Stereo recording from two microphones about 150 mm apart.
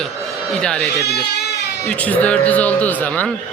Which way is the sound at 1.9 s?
10° left (ahead or behind).